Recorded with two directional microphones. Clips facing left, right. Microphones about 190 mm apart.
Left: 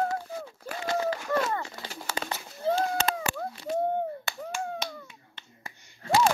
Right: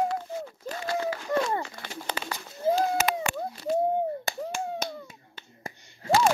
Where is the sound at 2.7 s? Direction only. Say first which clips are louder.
Right 2 dB; 25° right (ahead or behind).